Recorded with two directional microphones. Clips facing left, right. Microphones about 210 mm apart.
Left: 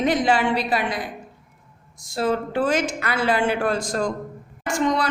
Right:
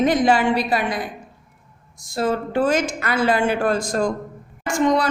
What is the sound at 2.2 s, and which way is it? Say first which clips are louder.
A woman's voice: right 2 dB; 45° right (ahead or behind).